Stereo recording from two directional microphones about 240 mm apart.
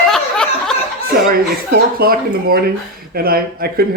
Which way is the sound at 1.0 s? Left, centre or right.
Right.